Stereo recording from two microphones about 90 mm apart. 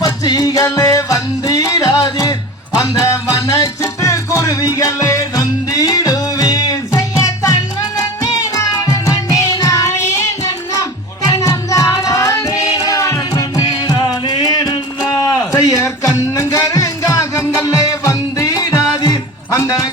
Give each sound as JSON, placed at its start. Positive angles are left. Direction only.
{"t": 0.0, "sound": "music", "side_deg": 45}
{"t": 2.7, "sound": "music", "side_deg": 35}